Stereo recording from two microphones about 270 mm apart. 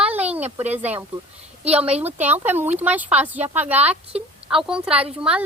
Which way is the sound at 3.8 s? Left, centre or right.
Right.